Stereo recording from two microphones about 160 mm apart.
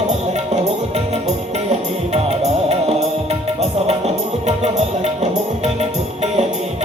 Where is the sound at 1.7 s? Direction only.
40° right (ahead or behind).